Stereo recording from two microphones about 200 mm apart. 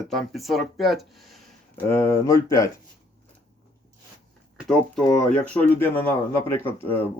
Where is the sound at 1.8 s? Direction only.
10° left (ahead or behind).